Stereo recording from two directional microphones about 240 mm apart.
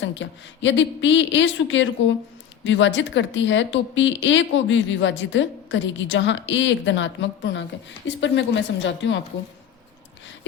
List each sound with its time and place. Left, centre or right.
0.0 s speech: left